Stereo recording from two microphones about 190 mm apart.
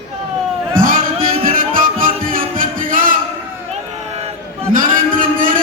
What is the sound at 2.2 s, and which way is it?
Music, 45° right (ahead or behind).